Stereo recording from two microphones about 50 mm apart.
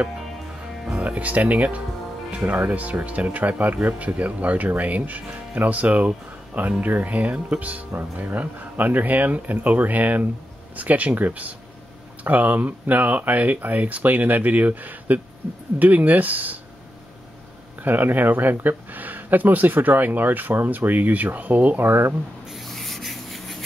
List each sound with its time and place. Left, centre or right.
1.0 s speech: right
17.7 s speech: right
22.5 s rub: centre